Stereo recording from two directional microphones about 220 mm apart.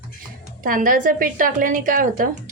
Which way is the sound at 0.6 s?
40° right (ahead or behind).